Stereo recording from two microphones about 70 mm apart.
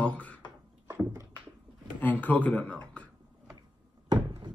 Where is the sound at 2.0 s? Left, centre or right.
Left.